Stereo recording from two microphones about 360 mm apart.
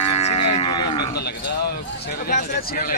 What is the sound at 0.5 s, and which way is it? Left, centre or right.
Cattle, centre.